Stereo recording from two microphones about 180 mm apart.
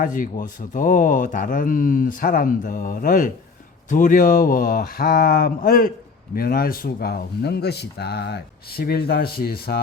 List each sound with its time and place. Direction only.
0.0 s speech: 45° left (ahead or behind)